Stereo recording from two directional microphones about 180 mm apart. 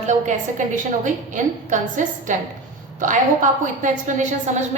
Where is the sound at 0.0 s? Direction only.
40° right (ahead or behind).